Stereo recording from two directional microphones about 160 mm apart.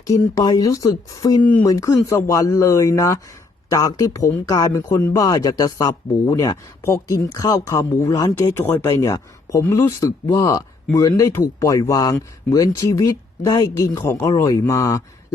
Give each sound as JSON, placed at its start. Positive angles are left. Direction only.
{"t": 0.1, "sound": "speech", "side_deg": 20}
{"t": 1.4, "sound": "speech", "side_deg": 10}
{"t": 1.6, "sound": "speech", "side_deg": 20}